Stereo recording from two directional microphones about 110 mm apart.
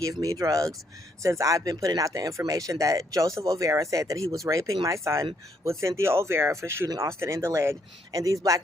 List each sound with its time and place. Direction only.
0.0 s speech: 30° right (ahead or behind)